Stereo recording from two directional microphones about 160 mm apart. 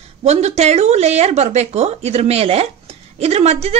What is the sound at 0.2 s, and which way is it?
A man's voice, 45° right (ahead or behind).